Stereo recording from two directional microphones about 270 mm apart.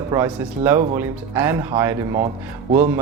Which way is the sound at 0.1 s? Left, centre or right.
Centre.